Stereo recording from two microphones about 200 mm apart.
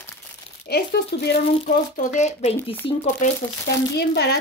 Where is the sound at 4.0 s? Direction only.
55° left (ahead or behind).